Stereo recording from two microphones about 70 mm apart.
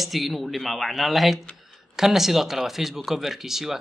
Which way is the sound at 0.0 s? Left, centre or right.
Centre.